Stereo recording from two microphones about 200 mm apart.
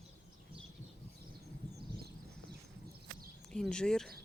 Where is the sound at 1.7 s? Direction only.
55° right (ahead or behind).